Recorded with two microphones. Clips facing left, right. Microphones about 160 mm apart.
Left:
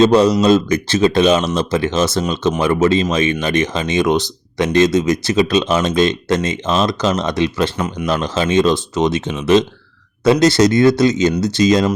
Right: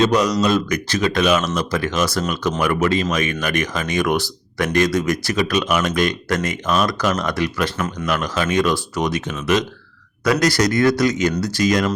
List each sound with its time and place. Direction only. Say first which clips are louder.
0.0 s speech: left 6 dB; 30° left (ahead or behind)